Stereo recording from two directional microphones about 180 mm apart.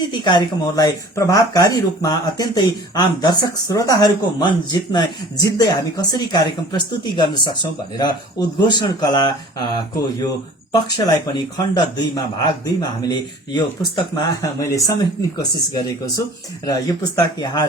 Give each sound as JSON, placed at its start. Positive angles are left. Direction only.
{"t": 0.1, "sound": "speech", "side_deg": 25}